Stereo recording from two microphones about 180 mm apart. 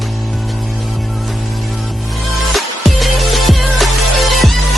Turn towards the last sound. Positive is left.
turn(degrees=0)  # may be behind; listen again after turning